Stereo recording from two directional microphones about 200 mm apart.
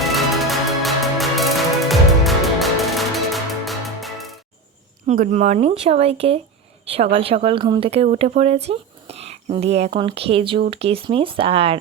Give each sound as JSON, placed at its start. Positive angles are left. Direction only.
{"t": 0.0, "sound": "music", "side_deg": 0}
{"t": 5.0, "sound": "speech", "side_deg": -40}